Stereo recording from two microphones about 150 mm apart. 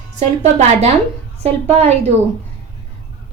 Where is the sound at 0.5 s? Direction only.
45° right (ahead or behind).